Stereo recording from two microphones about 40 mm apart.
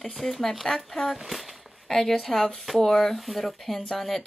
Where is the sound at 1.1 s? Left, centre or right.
Centre.